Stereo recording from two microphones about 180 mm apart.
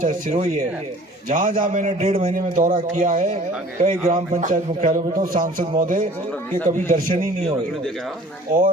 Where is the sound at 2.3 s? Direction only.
50° right (ahead or behind).